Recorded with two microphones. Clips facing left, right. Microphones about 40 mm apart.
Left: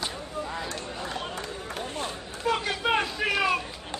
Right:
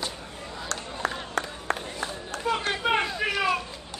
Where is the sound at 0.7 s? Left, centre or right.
Right.